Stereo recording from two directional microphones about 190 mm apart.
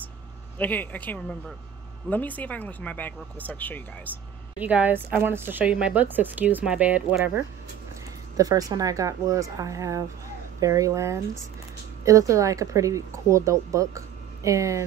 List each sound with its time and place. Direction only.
0.6 s speech: 10° left (ahead or behind)
4.6 s speech: 10° right (ahead or behind)
8.4 s speech: 20° right (ahead or behind)